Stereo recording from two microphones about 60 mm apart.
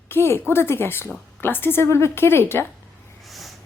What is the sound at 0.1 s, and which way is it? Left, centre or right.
A woman's voice, left.